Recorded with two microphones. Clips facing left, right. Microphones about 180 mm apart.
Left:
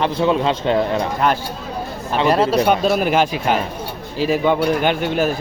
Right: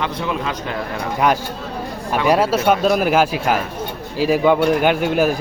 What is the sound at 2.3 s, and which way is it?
Speech, 5° right (ahead or behind).